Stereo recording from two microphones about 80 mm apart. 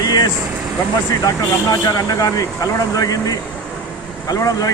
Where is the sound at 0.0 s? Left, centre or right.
Left.